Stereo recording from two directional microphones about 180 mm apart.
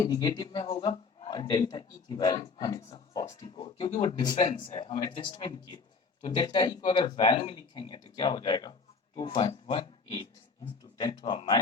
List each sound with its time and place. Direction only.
0.0 s speech: 20° left (ahead or behind)